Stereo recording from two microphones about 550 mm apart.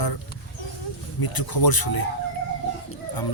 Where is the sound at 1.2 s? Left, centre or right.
Left.